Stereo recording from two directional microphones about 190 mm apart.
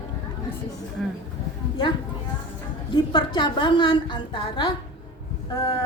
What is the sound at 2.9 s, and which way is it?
A woman's voice, 25° left (ahead or behind).